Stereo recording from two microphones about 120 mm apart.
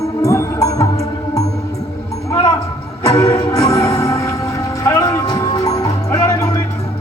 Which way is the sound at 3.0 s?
30° left (ahead or behind).